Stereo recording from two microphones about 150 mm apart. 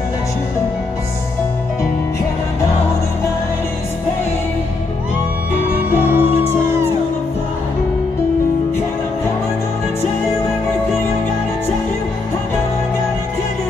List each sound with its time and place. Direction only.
5.9 s music: 15° right (ahead or behind)